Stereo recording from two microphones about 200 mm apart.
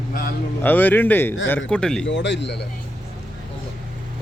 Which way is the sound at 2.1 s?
60° left (ahead or behind).